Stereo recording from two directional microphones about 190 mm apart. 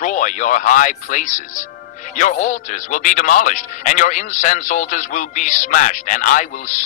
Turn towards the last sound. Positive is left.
turn(degrees=40)  # may be behind; listen again after turning